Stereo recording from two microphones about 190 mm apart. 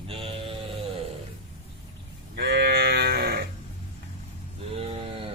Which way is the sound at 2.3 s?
55° right (ahead or behind).